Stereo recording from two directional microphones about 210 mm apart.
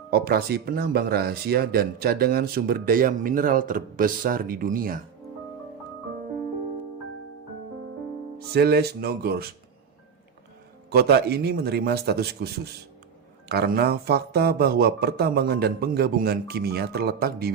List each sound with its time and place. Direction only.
0.1 s speech: 50° right (ahead or behind)
8.5 s speech: 50° right (ahead or behind)
10.9 s speech: 50° right (ahead or behind)